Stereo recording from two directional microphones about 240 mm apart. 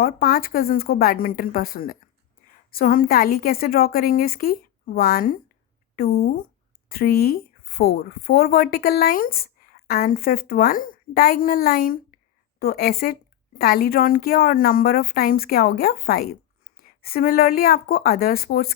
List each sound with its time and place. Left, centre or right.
0.0 s a woman's voice: left